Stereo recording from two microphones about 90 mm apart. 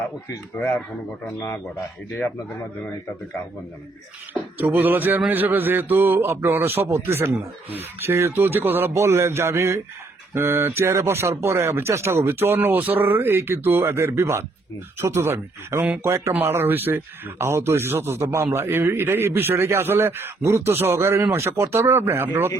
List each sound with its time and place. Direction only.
1.4 s a man's voice: 30° left (ahead or behind)
4.5 s a man's voice: 20° right (ahead or behind)